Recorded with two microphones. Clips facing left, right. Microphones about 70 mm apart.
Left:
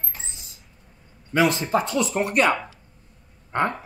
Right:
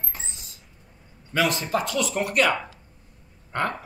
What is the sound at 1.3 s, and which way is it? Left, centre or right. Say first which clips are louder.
Speech: left 3 dB; left.